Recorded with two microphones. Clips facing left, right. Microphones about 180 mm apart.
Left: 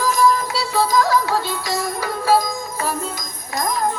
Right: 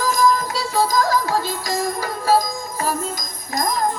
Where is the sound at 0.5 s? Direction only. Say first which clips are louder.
Left 1 dB; 45° right (ahead or behind).